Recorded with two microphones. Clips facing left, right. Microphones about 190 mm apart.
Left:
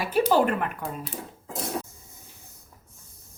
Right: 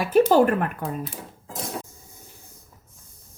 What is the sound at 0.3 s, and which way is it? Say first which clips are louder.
Speech: right 4 dB; 50° right (ahead or behind).